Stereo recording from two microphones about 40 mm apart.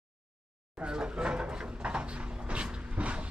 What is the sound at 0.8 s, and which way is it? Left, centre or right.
Cupboard open or close, right.